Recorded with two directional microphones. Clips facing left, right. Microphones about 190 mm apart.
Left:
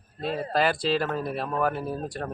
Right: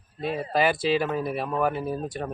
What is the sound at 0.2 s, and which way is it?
Speech, centre (ahead or behind).